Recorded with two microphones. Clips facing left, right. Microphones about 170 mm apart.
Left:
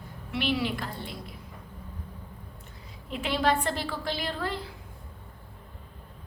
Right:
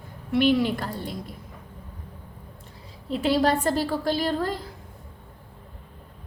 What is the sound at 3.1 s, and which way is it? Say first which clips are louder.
A woman's voice: right 5 dB; 35° right (ahead or behind).